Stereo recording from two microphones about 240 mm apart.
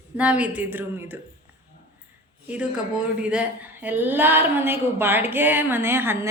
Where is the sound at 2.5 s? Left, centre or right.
Centre.